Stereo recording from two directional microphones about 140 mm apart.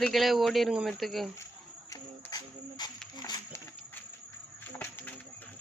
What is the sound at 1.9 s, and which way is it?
Music, 25° left (ahead or behind).